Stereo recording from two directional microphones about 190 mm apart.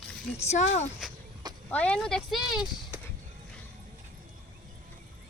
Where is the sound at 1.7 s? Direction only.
5° left (ahead or behind).